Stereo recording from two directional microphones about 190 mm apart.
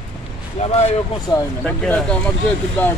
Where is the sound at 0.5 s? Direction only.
35° left (ahead or behind).